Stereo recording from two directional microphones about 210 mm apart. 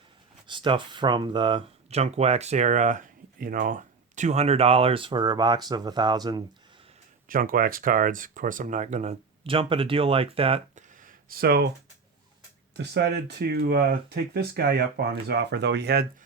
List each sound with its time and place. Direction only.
0.4 s speech: 25° right (ahead or behind)
7.3 s speech: 40° right (ahead or behind)
11.0 s a sound: 45° right (ahead or behind)
12.7 s speech: 55° right (ahead or behind)